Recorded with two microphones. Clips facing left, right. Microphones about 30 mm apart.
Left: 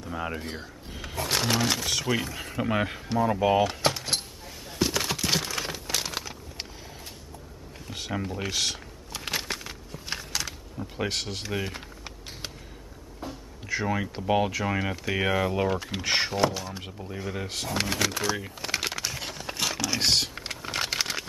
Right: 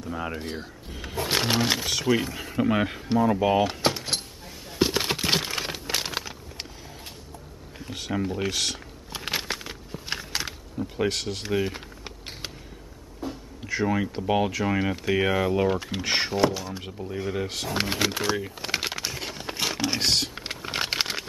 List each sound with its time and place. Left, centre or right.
0.0 s speech: centre
0.3 s speech: right
1.1 s speech: right
2.0 s speech: centre
3.2 s door: centre
4.7 s crumpling: right
7.9 s speech: centre
9.1 s a sound: centre
10.8 s speech: centre
13.7 s speech: centre
17.7 s speech: right
18.6 s a sound: centre
20.0 s typing: centre
20.3 s computer keyboard: centre